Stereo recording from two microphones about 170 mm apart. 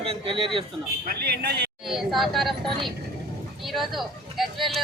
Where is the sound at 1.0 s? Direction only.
65° right (ahead or behind).